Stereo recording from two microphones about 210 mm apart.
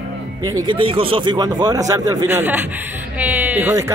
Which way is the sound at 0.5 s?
20° right (ahead or behind).